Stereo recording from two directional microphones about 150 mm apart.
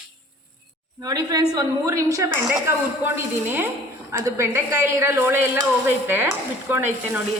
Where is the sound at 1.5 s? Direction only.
25° right (ahead or behind).